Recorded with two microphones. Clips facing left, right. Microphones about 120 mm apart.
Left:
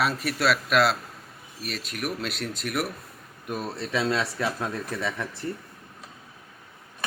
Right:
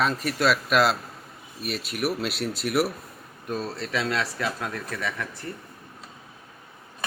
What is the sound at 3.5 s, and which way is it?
Speech, 15° left (ahead or behind).